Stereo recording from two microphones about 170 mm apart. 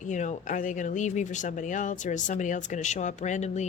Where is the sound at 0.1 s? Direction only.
45° left (ahead or behind).